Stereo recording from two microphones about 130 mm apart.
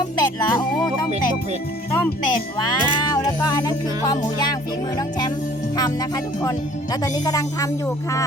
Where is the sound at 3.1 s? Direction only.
30° left (ahead or behind).